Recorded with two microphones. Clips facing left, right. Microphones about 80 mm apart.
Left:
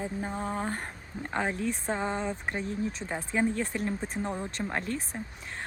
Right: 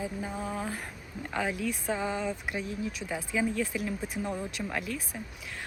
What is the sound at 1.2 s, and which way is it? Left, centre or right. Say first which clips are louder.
Speech: left 1 dB; left.